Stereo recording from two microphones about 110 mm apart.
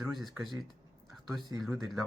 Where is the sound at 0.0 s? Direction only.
Centre (ahead or behind).